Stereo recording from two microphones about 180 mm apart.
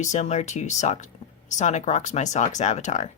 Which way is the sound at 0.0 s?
40° left (ahead or behind).